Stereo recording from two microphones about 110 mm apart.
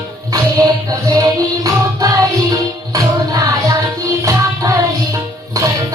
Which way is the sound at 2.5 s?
30° right (ahead or behind).